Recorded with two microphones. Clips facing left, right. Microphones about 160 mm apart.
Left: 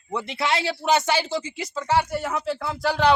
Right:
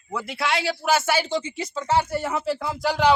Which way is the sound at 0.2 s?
Centre (ahead or behind).